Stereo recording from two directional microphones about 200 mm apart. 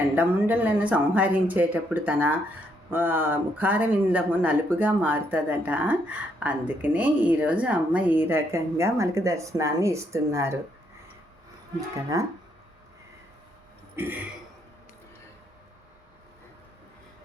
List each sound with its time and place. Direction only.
0.2 s speech: 10° right (ahead or behind)
12.1 s speech: 15° right (ahead or behind)
13.9 s cough: 10° right (ahead or behind)